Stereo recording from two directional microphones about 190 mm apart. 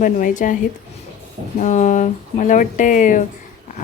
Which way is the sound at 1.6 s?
40° left (ahead or behind).